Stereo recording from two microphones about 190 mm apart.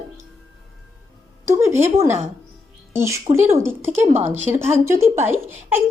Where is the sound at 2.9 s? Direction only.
15° right (ahead or behind).